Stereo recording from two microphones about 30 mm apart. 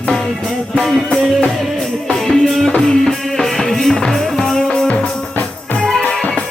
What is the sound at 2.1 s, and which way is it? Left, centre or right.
Music, centre.